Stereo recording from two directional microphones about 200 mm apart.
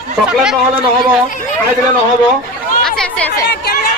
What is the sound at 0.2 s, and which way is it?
Speech, 5° right (ahead or behind).